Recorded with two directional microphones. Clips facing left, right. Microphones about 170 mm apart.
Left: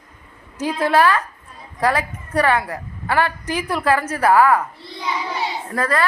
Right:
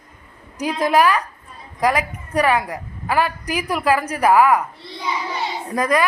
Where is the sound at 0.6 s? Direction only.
15° right (ahead or behind).